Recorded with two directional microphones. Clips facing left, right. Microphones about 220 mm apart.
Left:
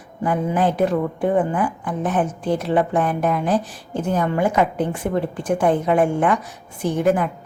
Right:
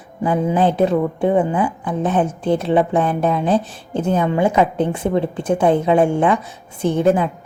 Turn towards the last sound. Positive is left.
turn(degrees=-25)  # may be behind; listen again after turning